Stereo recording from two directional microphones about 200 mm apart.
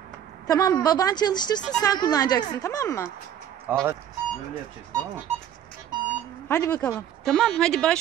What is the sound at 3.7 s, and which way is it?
Speech, 10° right (ahead or behind).